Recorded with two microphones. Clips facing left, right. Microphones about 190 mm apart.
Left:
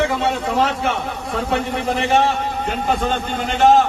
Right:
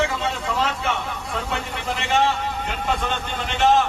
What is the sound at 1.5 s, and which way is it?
A man's voice, 40° left (ahead or behind).